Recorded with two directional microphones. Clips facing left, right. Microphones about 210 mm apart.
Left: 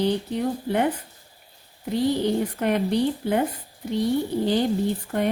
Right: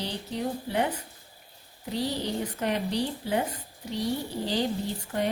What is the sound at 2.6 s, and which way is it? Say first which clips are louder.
Speech: left 5 dB; 55° left (ahead or behind).